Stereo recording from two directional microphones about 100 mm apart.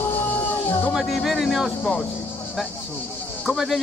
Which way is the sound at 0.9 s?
Centre (ahead or behind).